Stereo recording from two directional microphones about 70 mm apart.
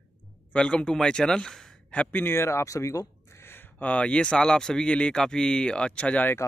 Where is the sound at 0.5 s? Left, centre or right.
Centre.